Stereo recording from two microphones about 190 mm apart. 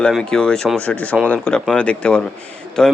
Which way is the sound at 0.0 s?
5° left (ahead or behind).